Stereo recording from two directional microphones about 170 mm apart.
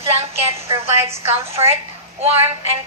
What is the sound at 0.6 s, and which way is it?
Speech, 15° right (ahead or behind).